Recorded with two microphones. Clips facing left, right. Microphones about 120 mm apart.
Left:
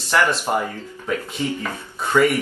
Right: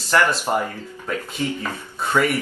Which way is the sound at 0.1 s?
5° left (ahead or behind).